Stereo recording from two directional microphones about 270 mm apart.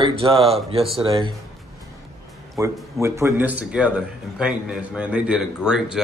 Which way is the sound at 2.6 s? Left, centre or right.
Centre.